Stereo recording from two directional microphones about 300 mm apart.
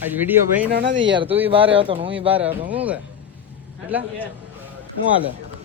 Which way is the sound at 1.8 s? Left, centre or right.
Centre.